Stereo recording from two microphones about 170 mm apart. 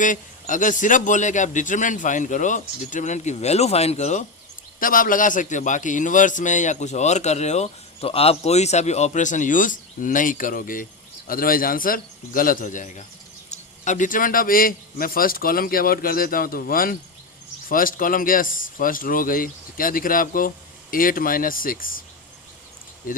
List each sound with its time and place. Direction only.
0.0 s a man's voice: 50° left (ahead or behind)
4.8 s a man's voice: 55° left (ahead or behind)